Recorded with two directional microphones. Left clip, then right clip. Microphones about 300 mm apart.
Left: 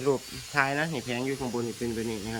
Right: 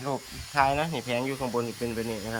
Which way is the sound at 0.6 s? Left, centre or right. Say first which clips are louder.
Right 2 dB; centre.